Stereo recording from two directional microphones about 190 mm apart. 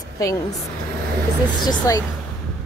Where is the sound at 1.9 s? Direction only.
15° left (ahead or behind).